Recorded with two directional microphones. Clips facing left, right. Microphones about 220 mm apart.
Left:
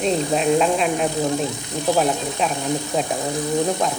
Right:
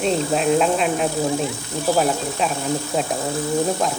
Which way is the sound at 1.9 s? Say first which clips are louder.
Even; centre (ahead or behind).